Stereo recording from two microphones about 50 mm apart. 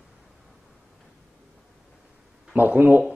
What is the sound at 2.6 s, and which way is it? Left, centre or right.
Speech, right.